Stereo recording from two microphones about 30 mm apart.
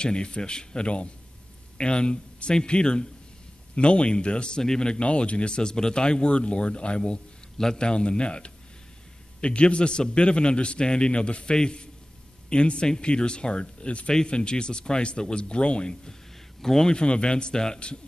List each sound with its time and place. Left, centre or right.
0.0 s a man's voice: left
5.0 s speech: left
7.5 s a man's voice: centre
7.8 s a man's voice: left
14.1 s speech: left
16.6 s a man's voice: centre
16.9 s speech: left